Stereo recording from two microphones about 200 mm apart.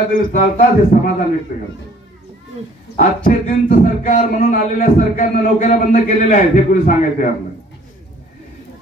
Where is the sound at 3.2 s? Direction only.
40° left (ahead or behind).